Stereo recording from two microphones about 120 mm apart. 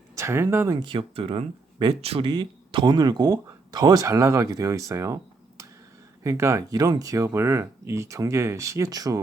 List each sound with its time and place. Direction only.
0.2 s speech: 25° right (ahead or behind)
0.8 s speech: 45° right (ahead or behind)
2.3 s speech: 40° right (ahead or behind)